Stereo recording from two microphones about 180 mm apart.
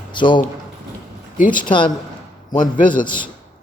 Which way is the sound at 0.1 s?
25° left (ahead or behind).